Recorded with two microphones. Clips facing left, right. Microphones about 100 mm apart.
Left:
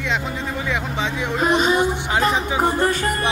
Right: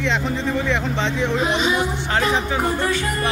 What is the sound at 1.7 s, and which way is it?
Speech, 15° left (ahead or behind).